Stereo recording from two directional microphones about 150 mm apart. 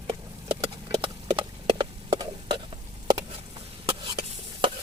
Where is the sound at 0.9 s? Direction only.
35° right (ahead or behind).